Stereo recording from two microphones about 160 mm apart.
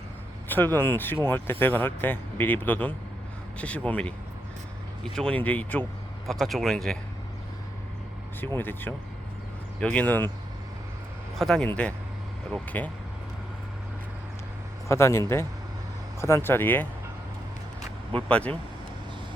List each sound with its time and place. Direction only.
0.5 s speech: 10° left (ahead or behind)
5.1 s speech: 5° left (ahead or behind)
8.4 s speech: 15° left (ahead or behind)
11.3 s speech: 5° left (ahead or behind)
14.8 s speech: 15° left (ahead or behind)
16.2 s speech: 15° left (ahead or behind)
18.1 s speech: 10° left (ahead or behind)